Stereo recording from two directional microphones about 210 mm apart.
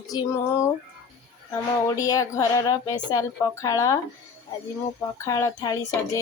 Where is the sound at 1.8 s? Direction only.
15° left (ahead or behind).